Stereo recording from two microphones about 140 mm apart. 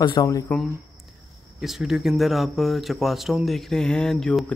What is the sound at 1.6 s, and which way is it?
Speech, centre (ahead or behind).